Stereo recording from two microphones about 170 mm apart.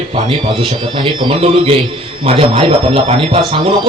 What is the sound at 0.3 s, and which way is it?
A man's voice, 30° right (ahead or behind).